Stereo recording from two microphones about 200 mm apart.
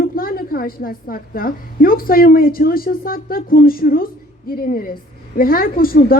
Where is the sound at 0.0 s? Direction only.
45° left (ahead or behind).